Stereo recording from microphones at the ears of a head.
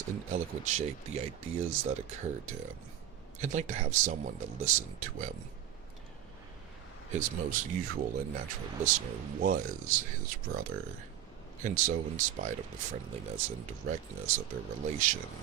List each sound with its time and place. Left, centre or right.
0.0 s speech: right
7.1 s speech: right